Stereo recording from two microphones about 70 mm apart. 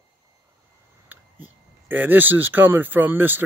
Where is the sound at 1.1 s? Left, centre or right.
Right.